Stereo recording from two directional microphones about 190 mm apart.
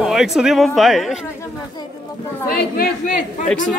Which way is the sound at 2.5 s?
55° left (ahead or behind).